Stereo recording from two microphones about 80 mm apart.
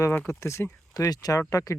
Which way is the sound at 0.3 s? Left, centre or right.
Left.